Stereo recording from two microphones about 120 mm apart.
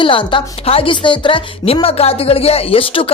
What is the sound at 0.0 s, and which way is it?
Speech, 45° left (ahead or behind).